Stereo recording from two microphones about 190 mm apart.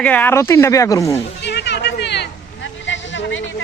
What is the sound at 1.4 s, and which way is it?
Chatter, 65° left (ahead or behind).